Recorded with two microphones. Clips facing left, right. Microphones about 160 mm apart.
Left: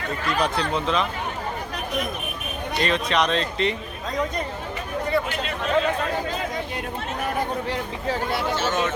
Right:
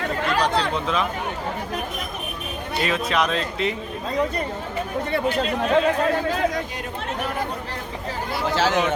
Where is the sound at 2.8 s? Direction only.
5° right (ahead or behind).